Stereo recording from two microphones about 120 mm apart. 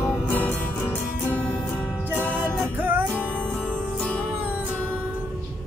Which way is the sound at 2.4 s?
15° right (ahead or behind).